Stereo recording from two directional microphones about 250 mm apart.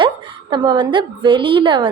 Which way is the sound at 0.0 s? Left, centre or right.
Centre.